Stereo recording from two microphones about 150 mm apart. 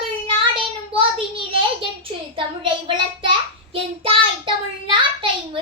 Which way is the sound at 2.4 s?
30° right (ahead or behind).